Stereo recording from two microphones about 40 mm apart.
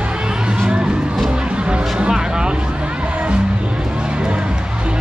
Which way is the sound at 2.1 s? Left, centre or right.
Centre.